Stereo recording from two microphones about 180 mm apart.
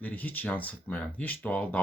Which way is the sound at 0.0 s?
10° left (ahead or behind).